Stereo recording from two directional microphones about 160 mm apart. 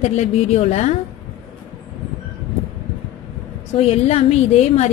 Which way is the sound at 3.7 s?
40° left (ahead or behind).